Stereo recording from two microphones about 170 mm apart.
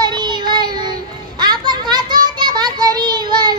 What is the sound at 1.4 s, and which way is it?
Children playing, 25° right (ahead or behind).